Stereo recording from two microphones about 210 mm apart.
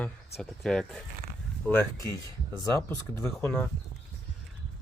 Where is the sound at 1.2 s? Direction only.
45° right (ahead or behind).